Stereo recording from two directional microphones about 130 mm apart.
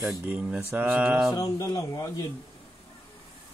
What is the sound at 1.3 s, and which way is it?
Speech, 25° left (ahead or behind).